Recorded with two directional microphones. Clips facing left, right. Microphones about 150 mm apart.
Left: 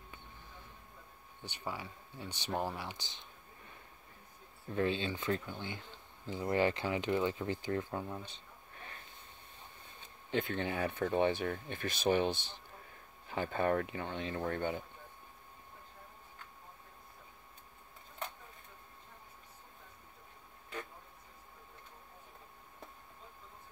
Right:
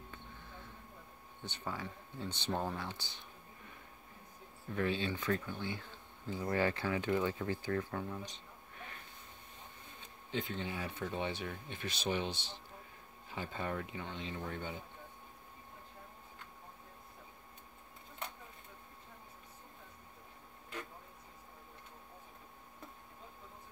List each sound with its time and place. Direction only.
1.4 s speech: 10° left (ahead or behind)
4.7 s speech: 25° left (ahead or behind)
10.3 s speech: 60° left (ahead or behind)